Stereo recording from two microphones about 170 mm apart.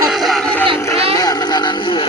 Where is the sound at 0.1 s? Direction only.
Centre (ahead or behind).